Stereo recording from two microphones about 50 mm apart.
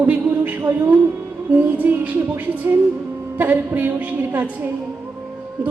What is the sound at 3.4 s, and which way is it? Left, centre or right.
A woman's voice, right.